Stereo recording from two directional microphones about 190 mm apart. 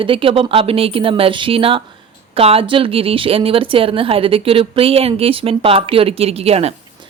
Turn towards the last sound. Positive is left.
turn(degrees=-30)  # may be behind; listen again after turning